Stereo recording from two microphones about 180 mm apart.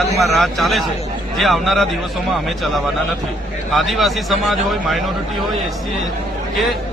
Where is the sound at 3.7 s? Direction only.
Centre (ahead or behind).